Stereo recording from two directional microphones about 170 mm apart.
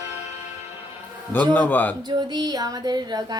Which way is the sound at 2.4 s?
20° right (ahead or behind).